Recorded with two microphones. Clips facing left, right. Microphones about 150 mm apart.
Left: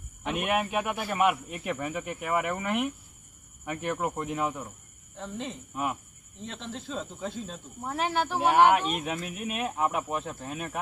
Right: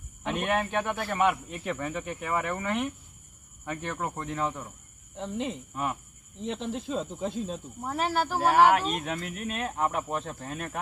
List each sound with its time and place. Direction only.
0.3 s speech: 10° left (ahead or behind)
5.1 s speech: 15° right (ahead or behind)
5.7 s speech: 10° left (ahead or behind)
6.4 s speech: 15° right (ahead or behind)
7.9 s speech: centre (ahead or behind)